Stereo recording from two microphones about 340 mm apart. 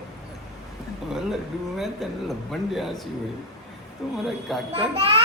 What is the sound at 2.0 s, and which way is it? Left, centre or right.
A man's voice, centre.